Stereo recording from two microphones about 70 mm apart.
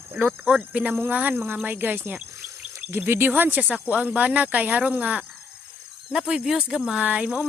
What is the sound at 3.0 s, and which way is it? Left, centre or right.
Speech, right.